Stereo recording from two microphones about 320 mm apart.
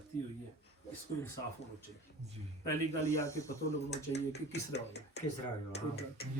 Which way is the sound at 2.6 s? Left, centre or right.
Centre.